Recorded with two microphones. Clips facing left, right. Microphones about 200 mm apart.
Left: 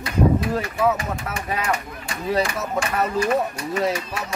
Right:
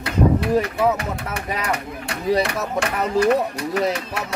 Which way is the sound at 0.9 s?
65° right (ahead or behind).